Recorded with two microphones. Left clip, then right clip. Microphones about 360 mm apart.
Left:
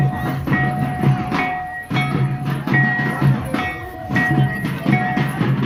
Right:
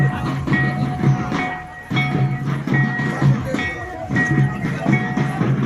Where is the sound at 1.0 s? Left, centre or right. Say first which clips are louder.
Left 2 dB; left.